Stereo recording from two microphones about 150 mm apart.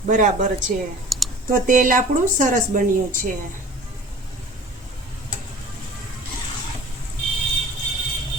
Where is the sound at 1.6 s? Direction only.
65° right (ahead or behind).